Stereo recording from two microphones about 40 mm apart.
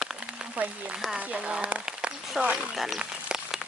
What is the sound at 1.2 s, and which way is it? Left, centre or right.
Speech, right.